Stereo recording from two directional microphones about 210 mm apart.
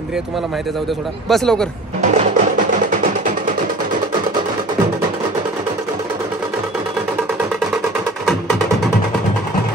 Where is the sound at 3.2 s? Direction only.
40° right (ahead or behind).